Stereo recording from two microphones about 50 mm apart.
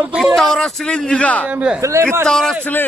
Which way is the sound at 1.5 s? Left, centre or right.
Right.